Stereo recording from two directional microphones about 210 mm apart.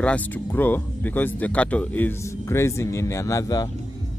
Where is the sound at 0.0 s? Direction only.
5° left (ahead or behind).